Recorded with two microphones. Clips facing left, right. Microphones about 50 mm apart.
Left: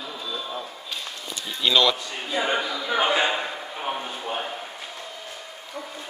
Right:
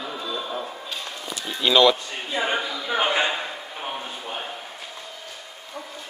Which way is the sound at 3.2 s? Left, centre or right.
Centre.